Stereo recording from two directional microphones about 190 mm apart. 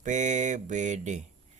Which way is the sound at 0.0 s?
40° right (ahead or behind).